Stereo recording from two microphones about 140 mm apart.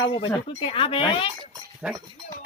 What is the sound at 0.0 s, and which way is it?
Speech, 35° left (ahead or behind).